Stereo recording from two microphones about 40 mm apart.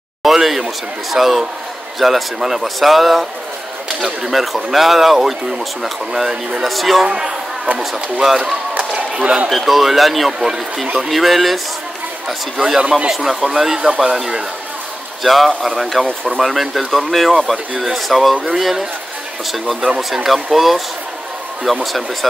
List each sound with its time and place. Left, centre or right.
0.2 s a sound: centre
1.1 s a man's voice: centre
7.1 s a man's voice: centre
8.7 s a sound: right
9.5 s a man's voice: centre
12.8 s speech: right
13.1 s a man's voice: centre
20.2 s speech: centre